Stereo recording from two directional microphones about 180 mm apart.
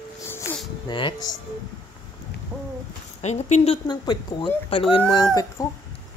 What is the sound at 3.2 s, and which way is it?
Speech, 40° left (ahead or behind).